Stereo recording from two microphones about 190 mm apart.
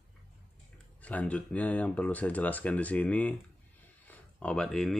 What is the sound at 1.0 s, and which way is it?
Speech, 10° left (ahead or behind).